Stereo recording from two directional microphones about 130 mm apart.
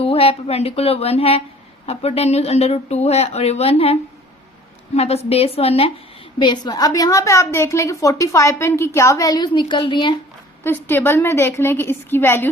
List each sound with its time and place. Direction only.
0.0 s a woman's voice: 45° left (ahead or behind)
4.9 s a woman's voice: 55° left (ahead or behind)
6.4 s a woman's voice: 35° left (ahead or behind)
10.6 s a woman's voice: 15° left (ahead or behind)